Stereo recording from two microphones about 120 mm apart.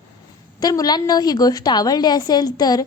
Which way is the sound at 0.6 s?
30° left (ahead or behind).